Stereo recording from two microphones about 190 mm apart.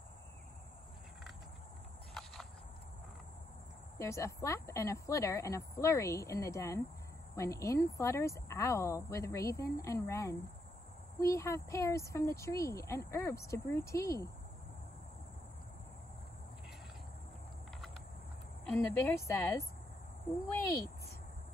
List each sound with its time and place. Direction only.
4.0 s speech: 15° left (ahead or behind)
18.7 s speech: 10° left (ahead or behind)